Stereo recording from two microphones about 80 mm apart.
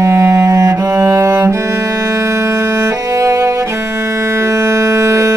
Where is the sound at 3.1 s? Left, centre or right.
Right.